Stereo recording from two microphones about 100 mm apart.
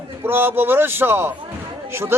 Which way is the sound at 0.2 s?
20° right (ahead or behind).